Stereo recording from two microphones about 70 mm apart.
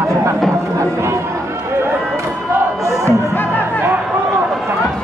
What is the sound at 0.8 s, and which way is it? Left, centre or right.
Run, right.